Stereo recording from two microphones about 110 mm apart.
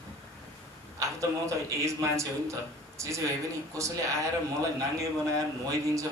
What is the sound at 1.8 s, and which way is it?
Speech, 25° right (ahead or behind).